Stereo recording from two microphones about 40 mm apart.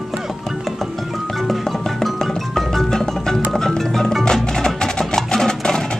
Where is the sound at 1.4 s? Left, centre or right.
Centre.